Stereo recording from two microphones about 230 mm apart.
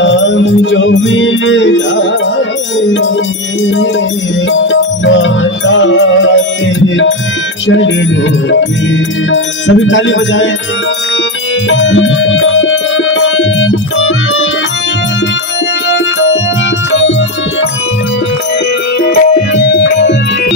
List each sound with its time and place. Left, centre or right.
0.0 s music: left
7.6 s music: left
9.3 s music: left
11.7 s music: left
15.9 s music: left
19.0 s music: left